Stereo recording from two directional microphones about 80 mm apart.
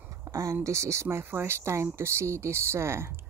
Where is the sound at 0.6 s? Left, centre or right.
Right.